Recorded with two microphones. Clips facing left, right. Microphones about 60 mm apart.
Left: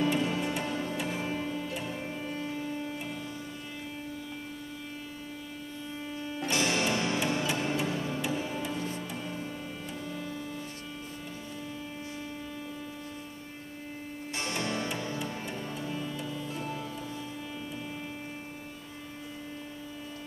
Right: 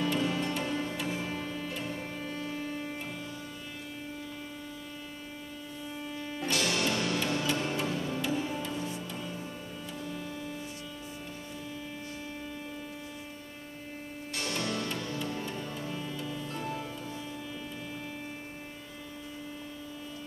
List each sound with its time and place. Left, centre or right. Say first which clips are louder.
0.0 s music: left 1 dB; centre
6.5 s music: left 2 dB; left
8.7 s music: left 1 dB; left
14.4 s music: left 1 dB; left
15.7 s music: left 2 dB; centre